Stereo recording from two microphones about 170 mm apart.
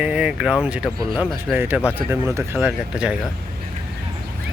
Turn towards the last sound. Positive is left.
turn(degrees=-5)  # may be behind; listen again after turning